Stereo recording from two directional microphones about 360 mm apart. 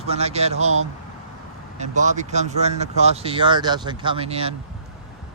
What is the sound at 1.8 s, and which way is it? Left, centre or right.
Speech, centre.